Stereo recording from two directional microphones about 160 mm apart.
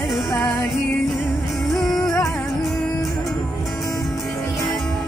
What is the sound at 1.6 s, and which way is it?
Music, centre (ahead or behind).